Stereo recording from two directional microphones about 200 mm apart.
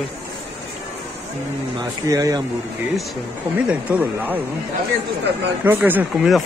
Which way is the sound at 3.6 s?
10° right (ahead or behind).